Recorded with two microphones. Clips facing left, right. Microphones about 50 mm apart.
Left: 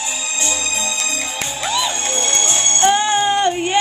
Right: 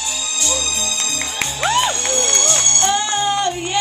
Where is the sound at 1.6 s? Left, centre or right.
Right.